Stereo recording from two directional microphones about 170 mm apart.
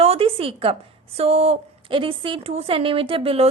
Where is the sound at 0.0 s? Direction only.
35° right (ahead or behind).